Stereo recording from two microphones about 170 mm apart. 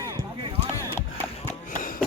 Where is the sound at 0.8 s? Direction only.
15° left (ahead or behind).